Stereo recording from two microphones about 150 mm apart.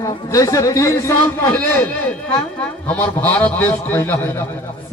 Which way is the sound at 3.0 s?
10° left (ahead or behind).